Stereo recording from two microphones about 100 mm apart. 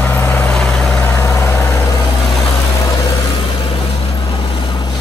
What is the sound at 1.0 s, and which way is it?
Vehicle, 25° left (ahead or behind).